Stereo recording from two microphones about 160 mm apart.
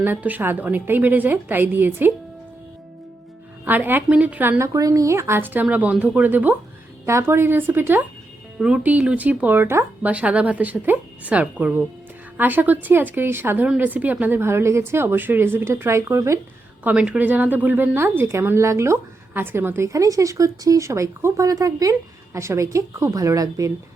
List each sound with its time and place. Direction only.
0.0 s a woman's voice: 10° right (ahead or behind)
3.7 s a woman's voice: 10° right (ahead or behind)
16.8 s a woman's voice: 5° right (ahead or behind)